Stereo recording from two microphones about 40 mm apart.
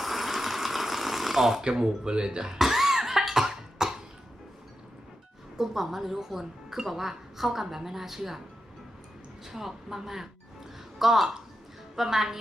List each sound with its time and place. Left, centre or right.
0.0 s a sound: centre
1.6 s speech: centre
2.6 s cough: centre
5.5 s speech: centre
9.4 s speech: centre